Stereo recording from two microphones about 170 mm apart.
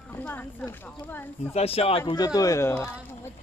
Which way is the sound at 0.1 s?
10° left (ahead or behind).